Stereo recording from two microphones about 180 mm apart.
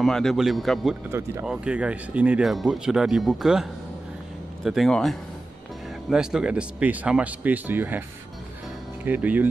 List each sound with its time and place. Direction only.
0.0 s speech: centre (ahead or behind)
4.6 s speech: centre (ahead or behind)
9.0 s speech: 10° right (ahead or behind)